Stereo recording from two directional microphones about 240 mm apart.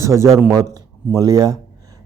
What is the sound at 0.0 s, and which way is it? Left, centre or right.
Speech, centre.